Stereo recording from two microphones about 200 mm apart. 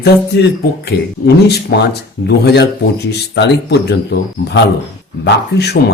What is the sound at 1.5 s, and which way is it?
Speech, 55° left (ahead or behind).